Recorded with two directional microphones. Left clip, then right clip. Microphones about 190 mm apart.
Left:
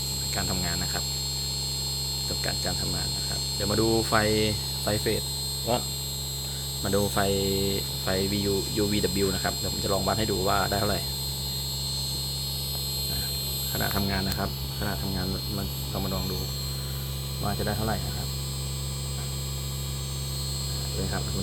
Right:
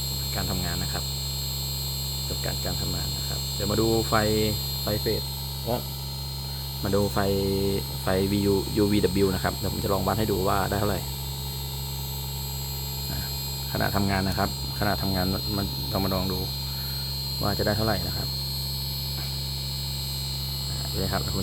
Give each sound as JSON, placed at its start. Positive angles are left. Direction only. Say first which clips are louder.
{"t": 3.6, "sound": "hum", "louder": "right 1 dB", "side_deg": -15}
{"t": 6.8, "sound": "speech", "louder": "right 1 dB", "side_deg": -25}
{"t": 13.7, "sound": "speech", "louder": "right 4 dB", "side_deg": -55}
{"t": 17.4, "sound": "speech", "louder": "right 4 dB", "side_deg": -65}